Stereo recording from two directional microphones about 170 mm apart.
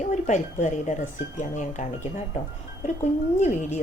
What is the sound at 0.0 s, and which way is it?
A woman's voice, 45° left (ahead or behind).